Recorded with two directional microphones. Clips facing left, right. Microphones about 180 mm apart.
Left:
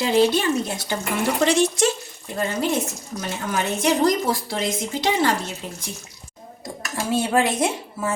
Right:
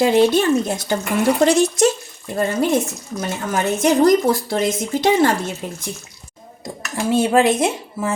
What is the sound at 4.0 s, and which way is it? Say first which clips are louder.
Speech: right 6 dB; 45° right (ahead or behind).